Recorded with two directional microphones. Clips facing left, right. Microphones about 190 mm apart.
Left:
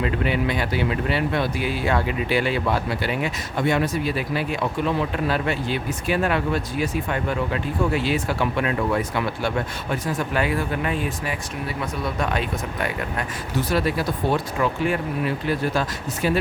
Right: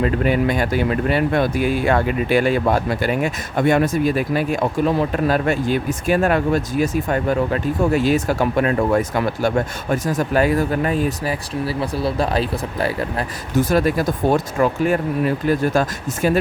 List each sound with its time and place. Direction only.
0.0 s speech: 45° right (ahead or behind)
13.6 s speech: 45° right (ahead or behind)